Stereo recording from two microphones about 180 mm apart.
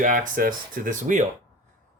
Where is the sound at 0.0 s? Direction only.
45° right (ahead or behind).